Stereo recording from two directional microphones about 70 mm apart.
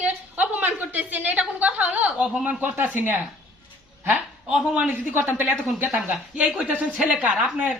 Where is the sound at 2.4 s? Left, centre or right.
Right.